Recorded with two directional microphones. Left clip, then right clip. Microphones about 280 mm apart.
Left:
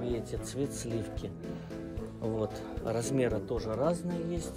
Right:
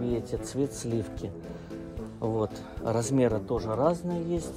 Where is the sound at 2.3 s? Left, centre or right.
Centre.